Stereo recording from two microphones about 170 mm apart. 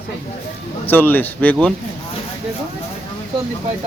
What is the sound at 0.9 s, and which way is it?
Speech, 10° left (ahead or behind).